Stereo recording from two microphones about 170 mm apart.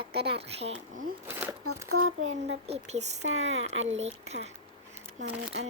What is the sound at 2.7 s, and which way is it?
Speech, 40° right (ahead or behind).